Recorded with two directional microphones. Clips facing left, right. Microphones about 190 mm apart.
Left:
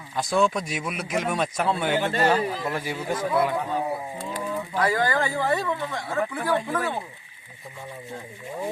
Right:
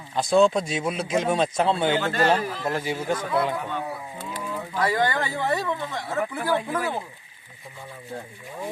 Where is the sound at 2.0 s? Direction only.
25° left (ahead or behind).